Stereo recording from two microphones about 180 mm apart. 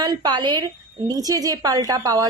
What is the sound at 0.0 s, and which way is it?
A woman's voice, 20° right (ahead or behind).